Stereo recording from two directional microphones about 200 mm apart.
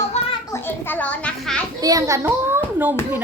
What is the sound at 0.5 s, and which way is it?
A child's voice, 10° left (ahead or behind).